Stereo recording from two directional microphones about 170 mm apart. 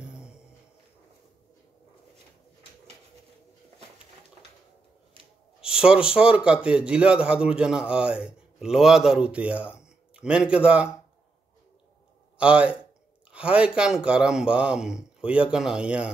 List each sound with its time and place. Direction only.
0.0 s music: 5° right (ahead or behind)
5.2 s a sound: 30° right (ahead or behind)
5.6 s a man's voice: 5° right (ahead or behind)
12.4 s a man's voice: 5° right (ahead or behind)